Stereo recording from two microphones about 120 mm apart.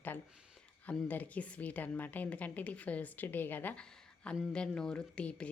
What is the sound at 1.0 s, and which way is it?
A woman's voice, 15° left (ahead or behind).